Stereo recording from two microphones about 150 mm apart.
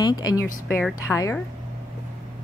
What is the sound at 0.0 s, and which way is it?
Speech, 25° left (ahead or behind).